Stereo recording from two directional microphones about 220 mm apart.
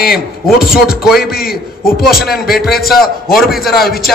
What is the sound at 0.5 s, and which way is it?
A man's voice, 40° left (ahead or behind).